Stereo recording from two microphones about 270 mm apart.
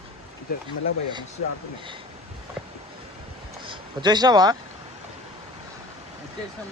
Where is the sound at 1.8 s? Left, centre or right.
Centre.